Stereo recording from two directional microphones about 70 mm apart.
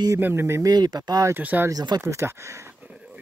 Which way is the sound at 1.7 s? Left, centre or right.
Right.